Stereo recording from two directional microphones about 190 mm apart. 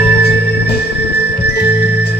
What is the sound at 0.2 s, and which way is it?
Music, 60° left (ahead or behind).